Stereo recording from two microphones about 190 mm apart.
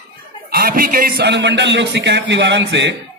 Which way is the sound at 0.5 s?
50° right (ahead or behind).